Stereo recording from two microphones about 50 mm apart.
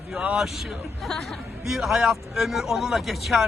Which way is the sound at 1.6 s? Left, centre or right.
Centre.